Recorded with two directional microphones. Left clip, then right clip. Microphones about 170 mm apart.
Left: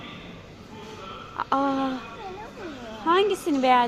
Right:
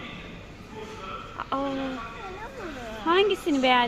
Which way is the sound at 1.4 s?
20° left (ahead or behind).